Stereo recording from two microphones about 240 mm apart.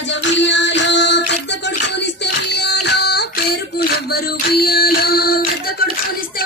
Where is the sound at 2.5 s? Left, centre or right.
Left.